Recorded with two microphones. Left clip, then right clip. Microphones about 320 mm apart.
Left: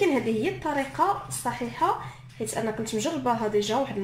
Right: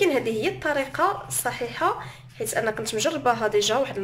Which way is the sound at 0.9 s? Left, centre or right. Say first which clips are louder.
Right 1 dB; right.